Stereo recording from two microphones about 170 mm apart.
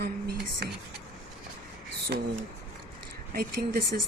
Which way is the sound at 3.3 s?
60° right (ahead or behind).